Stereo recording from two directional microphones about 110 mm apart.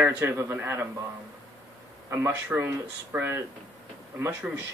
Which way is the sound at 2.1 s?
25° right (ahead or behind).